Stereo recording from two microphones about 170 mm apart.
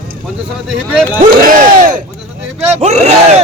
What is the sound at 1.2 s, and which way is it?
Speech, 50° right (ahead or behind).